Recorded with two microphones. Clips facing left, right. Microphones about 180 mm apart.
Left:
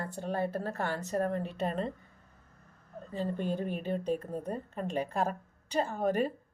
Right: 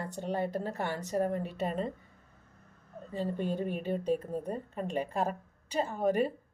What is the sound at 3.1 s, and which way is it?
A woman's voice, 5° right (ahead or behind).